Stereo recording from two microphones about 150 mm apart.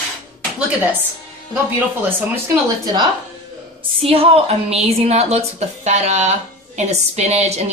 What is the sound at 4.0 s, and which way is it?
A woman's voice, 40° right (ahead or behind).